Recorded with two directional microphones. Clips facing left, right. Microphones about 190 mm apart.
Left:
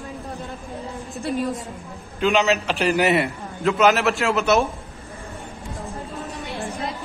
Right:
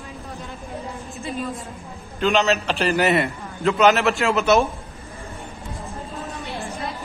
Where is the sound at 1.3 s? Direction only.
85° left.